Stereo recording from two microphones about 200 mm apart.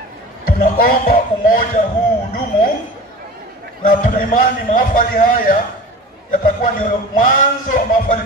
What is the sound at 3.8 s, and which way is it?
A man's voice, 40° left (ahead or behind).